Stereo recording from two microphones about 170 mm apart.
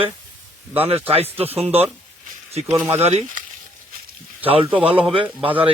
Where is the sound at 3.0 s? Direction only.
40° right (ahead or behind).